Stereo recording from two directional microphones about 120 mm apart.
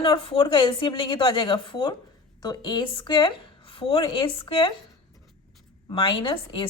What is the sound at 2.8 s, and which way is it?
A woman's voice, 45° left (ahead or behind).